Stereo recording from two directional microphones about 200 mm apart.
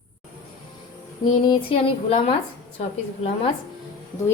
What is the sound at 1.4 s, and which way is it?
Speech, 25° left (ahead or behind).